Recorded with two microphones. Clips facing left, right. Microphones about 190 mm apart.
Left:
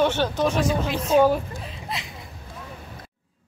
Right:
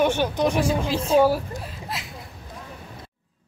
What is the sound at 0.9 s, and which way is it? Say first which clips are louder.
Speech: right 1 dB; 30° right (ahead or behind).